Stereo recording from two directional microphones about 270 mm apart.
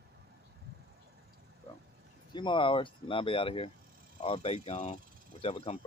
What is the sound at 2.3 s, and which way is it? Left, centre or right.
Speech, centre.